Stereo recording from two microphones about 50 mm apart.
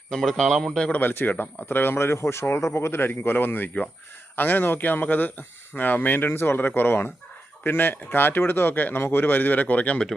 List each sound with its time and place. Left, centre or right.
0.1 s a man's voice: centre
0.9 s a man's voice: left
6.6 s a man's voice: left